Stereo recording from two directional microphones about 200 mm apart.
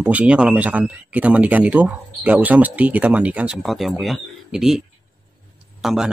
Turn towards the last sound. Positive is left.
turn(degrees=0)  # may be behind; listen again after turning